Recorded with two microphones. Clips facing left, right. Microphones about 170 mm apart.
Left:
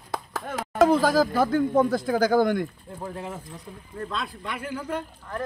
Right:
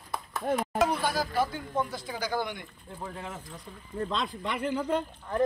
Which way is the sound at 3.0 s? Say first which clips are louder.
Left 5 dB; 5° left (ahead or behind).